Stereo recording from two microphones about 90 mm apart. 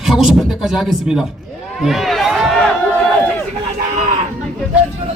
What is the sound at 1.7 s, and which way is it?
Run, centre (ahead or behind).